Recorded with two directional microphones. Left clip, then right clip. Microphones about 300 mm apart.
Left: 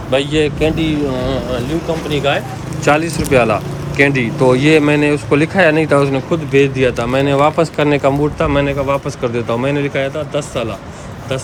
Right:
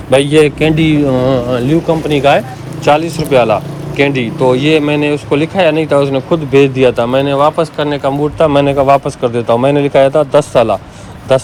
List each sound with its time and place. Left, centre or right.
0.2 s speech: centre
2.8 s speech: centre
4.5 s speech: left
4.8 s speech: centre